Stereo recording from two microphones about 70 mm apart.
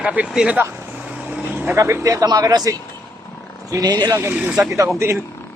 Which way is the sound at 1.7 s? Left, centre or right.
Right.